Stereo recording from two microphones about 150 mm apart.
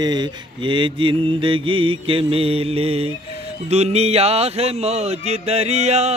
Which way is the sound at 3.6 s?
45° right (ahead or behind).